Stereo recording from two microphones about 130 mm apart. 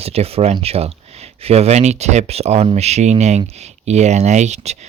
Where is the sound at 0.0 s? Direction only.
50° right (ahead or behind).